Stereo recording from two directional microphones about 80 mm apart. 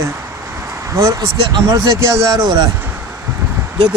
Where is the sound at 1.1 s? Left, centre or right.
Right.